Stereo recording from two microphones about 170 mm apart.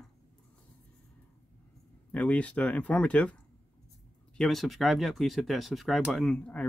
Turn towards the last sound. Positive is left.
turn(degrees=5)  # may be behind; listen again after turning